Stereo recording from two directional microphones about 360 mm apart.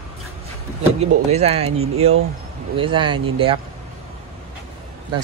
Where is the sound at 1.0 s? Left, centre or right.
Centre.